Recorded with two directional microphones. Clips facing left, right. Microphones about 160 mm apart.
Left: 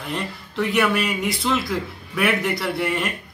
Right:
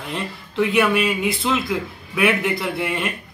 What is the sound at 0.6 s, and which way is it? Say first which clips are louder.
A man's voice: right 3 dB; 5° right (ahead or behind).